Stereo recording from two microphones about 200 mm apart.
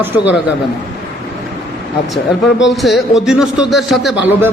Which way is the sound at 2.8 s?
Centre (ahead or behind).